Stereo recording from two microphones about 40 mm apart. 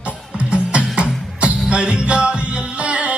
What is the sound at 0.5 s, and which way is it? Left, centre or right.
Music, right.